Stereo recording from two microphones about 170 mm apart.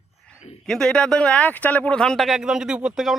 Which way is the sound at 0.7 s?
5° left (ahead or behind).